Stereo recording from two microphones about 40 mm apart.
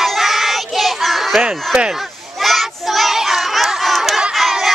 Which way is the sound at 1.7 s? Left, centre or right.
Centre.